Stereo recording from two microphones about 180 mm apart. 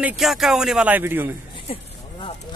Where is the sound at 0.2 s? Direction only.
Centre (ahead or behind).